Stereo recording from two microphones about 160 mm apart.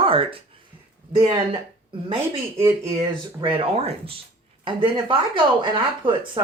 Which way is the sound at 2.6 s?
15° right (ahead or behind).